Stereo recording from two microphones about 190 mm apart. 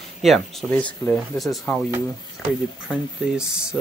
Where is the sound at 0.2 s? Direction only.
Centre (ahead or behind).